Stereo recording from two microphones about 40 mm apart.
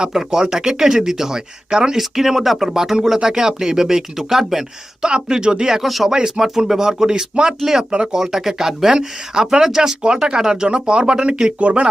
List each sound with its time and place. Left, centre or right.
0.0 s speech: centre
5.0 s speech: right
5.8 s speech: centre
6.1 s speech: centre